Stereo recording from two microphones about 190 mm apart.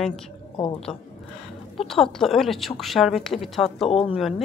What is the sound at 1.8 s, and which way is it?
A woman's voice, centre (ahead or behind).